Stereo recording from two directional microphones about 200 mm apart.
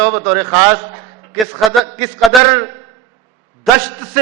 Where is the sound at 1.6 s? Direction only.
Centre (ahead or behind).